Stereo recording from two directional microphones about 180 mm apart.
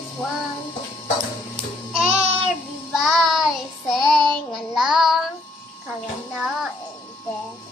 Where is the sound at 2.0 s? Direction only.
5° right (ahead or behind).